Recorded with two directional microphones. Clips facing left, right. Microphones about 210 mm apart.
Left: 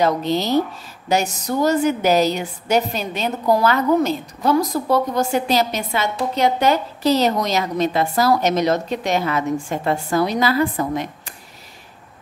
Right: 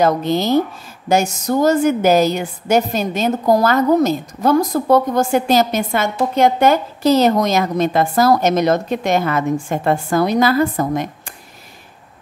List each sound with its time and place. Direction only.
0.0 s a woman's voice: 50° right (ahead or behind)